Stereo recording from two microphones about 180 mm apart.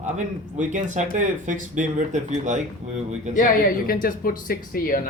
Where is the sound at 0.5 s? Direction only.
45° right (ahead or behind).